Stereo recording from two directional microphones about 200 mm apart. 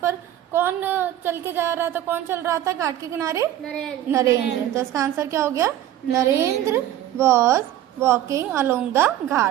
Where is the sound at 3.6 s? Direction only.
5° left (ahead or behind).